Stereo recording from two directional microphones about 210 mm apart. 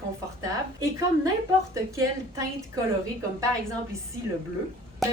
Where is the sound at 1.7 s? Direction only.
15° right (ahead or behind).